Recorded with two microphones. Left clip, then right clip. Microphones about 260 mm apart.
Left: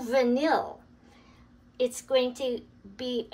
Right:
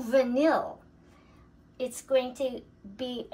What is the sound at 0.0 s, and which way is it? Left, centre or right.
Speech, centre.